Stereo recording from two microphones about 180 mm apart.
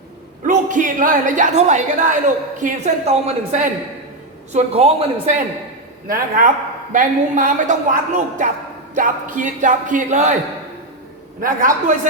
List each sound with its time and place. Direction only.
0.4 s a woman's voice: 45° right (ahead or behind)
6.1 s a woman's voice: 50° right (ahead or behind)
11.3 s a woman's voice: 50° right (ahead or behind)